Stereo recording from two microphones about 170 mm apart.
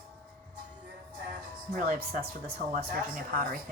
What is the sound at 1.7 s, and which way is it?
Speech, 50° right (ahead or behind).